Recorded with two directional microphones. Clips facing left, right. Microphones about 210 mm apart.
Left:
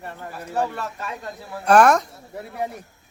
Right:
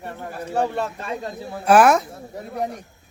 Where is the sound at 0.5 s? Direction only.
30° right (ahead or behind).